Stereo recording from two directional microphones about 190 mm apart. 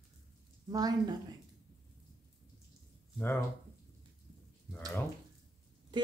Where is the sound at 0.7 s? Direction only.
20° right (ahead or behind).